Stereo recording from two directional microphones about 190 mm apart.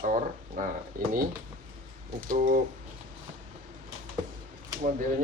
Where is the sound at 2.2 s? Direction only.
45° right (ahead or behind).